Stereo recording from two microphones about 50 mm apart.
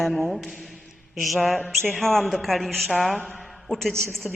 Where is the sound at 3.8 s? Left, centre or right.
Centre.